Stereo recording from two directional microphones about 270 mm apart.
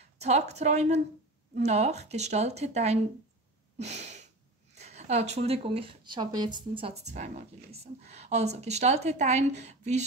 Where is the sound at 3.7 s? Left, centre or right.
Right.